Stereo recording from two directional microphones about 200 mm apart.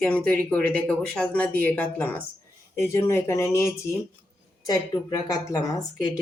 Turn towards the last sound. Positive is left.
turn(degrees=20)  # may be behind; listen again after turning